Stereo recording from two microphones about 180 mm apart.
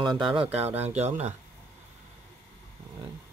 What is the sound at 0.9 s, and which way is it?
Speech, 40° right (ahead or behind).